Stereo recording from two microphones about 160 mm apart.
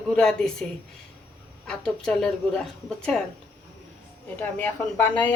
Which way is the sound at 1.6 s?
5° left (ahead or behind).